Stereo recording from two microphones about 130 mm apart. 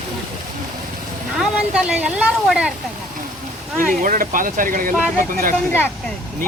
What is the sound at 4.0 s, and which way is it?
Speech, 90° right.